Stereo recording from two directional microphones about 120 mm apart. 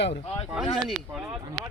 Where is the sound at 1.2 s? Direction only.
20° right (ahead or behind).